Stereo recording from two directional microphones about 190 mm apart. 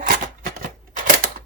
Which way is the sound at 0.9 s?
45° right (ahead or behind).